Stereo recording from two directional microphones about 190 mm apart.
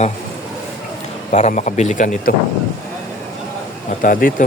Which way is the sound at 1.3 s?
40° left (ahead or behind).